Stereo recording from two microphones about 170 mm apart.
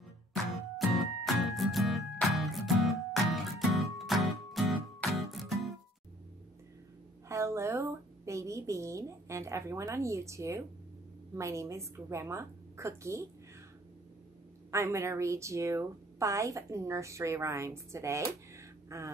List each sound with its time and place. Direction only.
0.3 s music: centre (ahead or behind)
7.2 s a woman's voice: 15° right (ahead or behind)
14.7 s a woman's voice: 15° right (ahead or behind)
18.5 s a sound: 20° right (ahead or behind)